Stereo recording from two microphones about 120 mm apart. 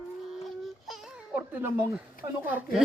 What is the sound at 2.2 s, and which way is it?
Speech, 40° right (ahead or behind).